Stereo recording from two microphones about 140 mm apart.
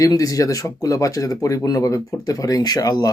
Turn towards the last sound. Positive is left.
turn(degrees=25)  # may be behind; listen again after turning